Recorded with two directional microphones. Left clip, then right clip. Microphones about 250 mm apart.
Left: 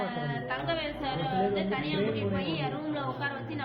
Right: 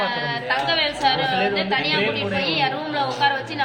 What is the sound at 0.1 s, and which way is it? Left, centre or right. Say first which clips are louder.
A woman's voice: right 11 dB; right.